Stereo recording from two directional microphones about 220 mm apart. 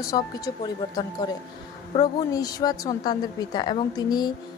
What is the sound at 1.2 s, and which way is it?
A woman's voice, 15° left (ahead or behind).